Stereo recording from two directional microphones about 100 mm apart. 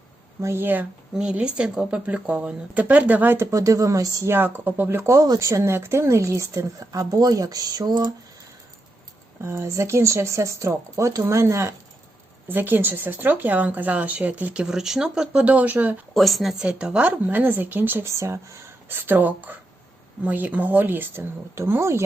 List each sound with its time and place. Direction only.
0.4 s speech: 20° right (ahead or behind)
1.1 s speech: 10° right (ahead or behind); by 8.1 s 45° right (ahead or behind)
9.4 s speech: 25° right (ahead or behind)
12.5 s speech: 20° right (ahead or behind)
16.1 s speech: centre (ahead or behind); by 22.0 s 30° right (ahead or behind)